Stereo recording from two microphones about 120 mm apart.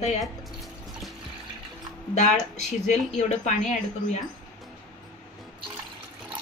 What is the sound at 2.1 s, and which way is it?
Speech, 80° left.